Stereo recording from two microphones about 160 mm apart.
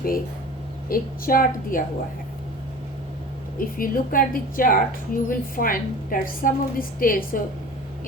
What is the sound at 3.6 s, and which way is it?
Speech, 60° left (ahead or behind).